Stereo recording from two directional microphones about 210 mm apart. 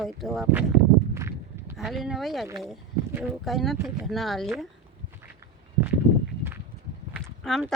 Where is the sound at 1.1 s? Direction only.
10° right (ahead or behind).